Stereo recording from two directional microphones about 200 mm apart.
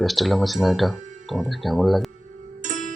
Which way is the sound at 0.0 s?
Centre (ahead or behind).